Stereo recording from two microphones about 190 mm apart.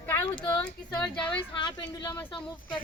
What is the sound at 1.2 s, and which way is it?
Speech, 25° left (ahead or behind).